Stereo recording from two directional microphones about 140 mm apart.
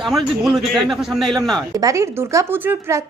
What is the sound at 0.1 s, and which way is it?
A man's voice, centre (ahead or behind).